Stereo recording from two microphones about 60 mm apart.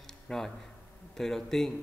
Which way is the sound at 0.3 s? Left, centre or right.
Centre.